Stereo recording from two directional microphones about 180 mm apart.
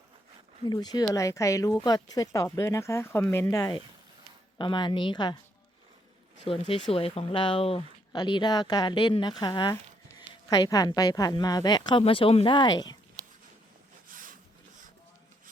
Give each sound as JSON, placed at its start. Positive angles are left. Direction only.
{"t": 0.6, "sound": "speech", "side_deg": 20}
{"t": 6.4, "sound": "speech", "side_deg": 35}
{"t": 14.1, "sound": "a sound", "side_deg": -50}